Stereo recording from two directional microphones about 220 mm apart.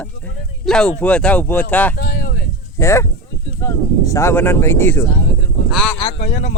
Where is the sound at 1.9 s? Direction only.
45° left (ahead or behind).